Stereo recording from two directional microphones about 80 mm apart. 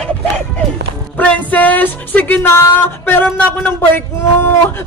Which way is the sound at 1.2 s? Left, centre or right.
Centre.